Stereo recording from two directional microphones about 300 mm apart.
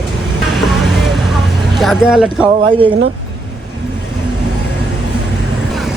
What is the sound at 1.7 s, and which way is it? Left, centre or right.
Speech, centre.